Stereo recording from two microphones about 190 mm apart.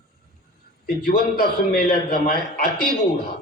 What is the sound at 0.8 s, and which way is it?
A man's voice, 50° left (ahead or behind).